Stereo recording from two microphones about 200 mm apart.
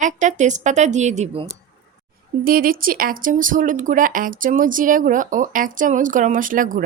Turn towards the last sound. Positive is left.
turn(degrees=-40)  # may be behind; listen again after turning